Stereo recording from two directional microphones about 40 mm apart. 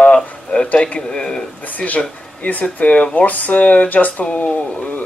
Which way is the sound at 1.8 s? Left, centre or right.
Left.